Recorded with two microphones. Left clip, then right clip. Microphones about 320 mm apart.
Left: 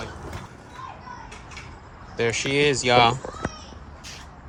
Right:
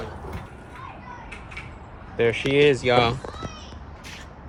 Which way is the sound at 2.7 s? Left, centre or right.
Centre.